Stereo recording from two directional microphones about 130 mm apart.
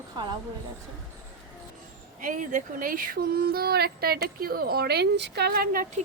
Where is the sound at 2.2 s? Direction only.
90° right.